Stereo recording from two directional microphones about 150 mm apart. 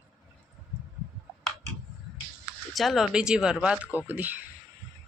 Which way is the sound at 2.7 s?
Centre (ahead or behind).